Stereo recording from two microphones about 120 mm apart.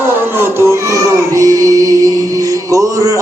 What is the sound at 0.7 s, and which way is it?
Music, 25° right (ahead or behind).